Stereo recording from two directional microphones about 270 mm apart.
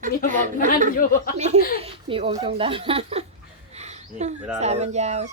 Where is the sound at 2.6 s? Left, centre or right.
Centre.